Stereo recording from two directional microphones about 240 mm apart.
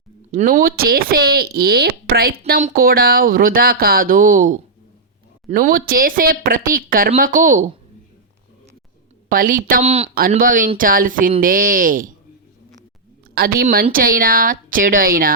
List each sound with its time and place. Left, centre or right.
0.3 s speech: right
9.3 s speech: right
10.2 s speech: right
13.3 s speech: right